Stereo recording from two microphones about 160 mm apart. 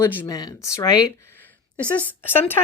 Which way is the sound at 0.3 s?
25° left (ahead or behind).